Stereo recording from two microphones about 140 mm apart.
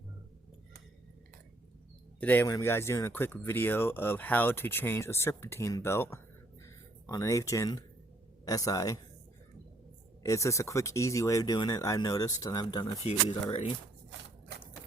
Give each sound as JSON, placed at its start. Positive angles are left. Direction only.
{"t": 2.2, "sound": "speech", "side_deg": 15}
{"t": 10.2, "sound": "speech", "side_deg": 20}
{"t": 13.0, "sound": "speech", "side_deg": 40}
{"t": 13.5, "sound": "speech", "side_deg": 45}